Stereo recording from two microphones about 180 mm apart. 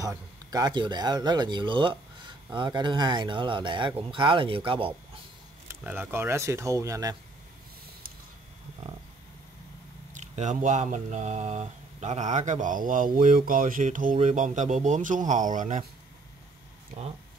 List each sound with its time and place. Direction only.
0.0 s speech: 20° right (ahead or behind)
5.7 s speech: 10° right (ahead or behind)
10.1 s speech: 40° right (ahead or behind)